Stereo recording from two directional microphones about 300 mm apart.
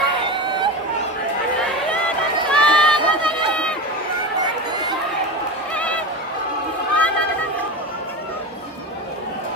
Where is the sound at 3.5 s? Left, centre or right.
Centre.